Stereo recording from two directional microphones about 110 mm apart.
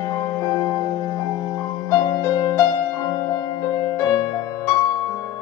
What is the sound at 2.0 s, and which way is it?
Music, 30° left (ahead or behind).